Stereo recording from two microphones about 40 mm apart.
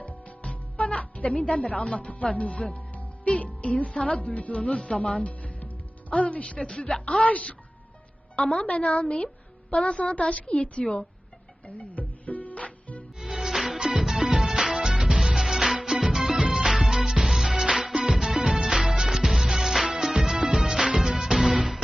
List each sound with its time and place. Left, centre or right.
0.0 s music: left
0.4 s music: left
1.9 s speech: left
2.9 s music: left
3.9 s a woman's voice: left
8.6 s a woman's voice: left
11.8 s music: left
13.1 s music: centre
13.7 s music: right